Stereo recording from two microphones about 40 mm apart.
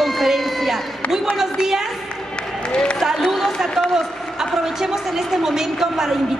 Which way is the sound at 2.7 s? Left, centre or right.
Left.